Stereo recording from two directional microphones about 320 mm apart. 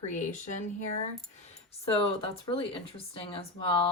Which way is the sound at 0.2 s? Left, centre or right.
Left.